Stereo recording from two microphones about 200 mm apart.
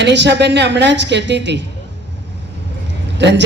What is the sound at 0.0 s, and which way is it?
A man's voice, 60° right (ahead or behind).